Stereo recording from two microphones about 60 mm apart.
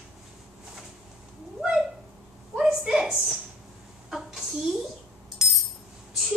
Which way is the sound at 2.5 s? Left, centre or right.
Centre.